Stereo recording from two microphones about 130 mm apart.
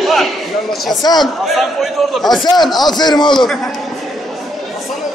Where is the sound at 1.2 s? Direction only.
Centre (ahead or behind).